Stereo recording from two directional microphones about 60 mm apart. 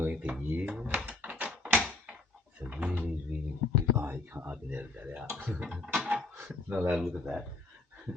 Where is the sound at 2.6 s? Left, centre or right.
Right.